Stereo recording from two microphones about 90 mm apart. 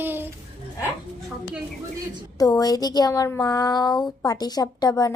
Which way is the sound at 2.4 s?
45° left (ahead or behind).